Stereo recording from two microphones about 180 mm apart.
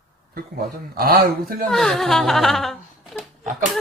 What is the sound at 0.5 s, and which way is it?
A man's voice, 55° right (ahead or behind).